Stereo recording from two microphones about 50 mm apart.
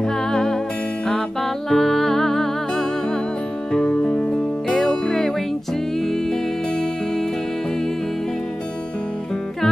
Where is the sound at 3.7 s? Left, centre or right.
Left.